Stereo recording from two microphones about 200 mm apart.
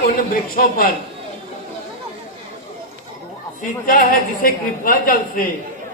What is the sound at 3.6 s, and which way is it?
A woman's voice, 45° left (ahead or behind).